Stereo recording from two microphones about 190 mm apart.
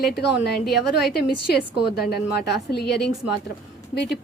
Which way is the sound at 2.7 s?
60° left (ahead or behind).